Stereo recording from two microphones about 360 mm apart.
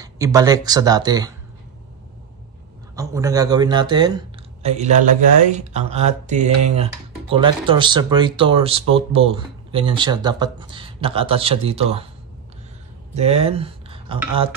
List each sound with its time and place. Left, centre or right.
0.0 s speech: centre
3.0 s speech: centre
13.1 s speech: centre